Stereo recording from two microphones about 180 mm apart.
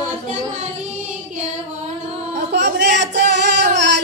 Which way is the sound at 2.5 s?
70° right (ahead or behind).